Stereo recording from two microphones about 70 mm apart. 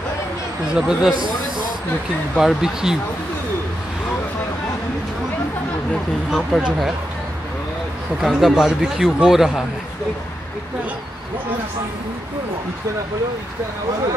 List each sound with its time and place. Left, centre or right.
0.7 s speech: centre
2.3 s speech: centre
6.5 s a man's voice: centre
8.2 s a man's voice: centre